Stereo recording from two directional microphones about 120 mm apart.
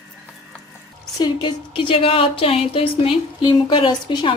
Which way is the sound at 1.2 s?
40° left (ahead or behind).